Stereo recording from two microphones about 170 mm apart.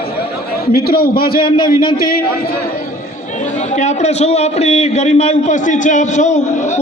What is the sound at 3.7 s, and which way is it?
A man's voice, 45° left (ahead or behind).